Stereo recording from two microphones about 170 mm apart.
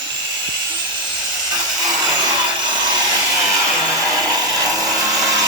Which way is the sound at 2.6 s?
25° right (ahead or behind).